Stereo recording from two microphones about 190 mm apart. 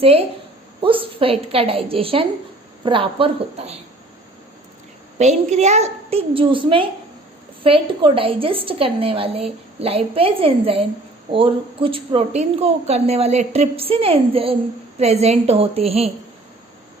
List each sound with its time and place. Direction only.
0.0 s a woman's voice: 30° right (ahead or behind)
5.1 s a woman's voice: 35° right (ahead or behind)